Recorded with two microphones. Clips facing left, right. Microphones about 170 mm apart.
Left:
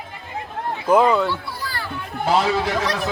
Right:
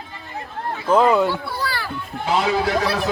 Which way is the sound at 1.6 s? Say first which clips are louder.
Right 4 dB; 75° right (ahead or behind).